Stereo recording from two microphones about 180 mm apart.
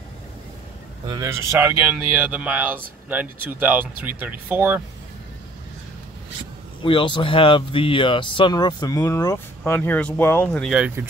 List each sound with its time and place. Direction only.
1.0 s speech: 20° right (ahead or behind)
6.8 s speech: 30° left (ahead or behind); by 10.7 s 5° left (ahead or behind)
10.7 s speech: 5° right (ahead or behind)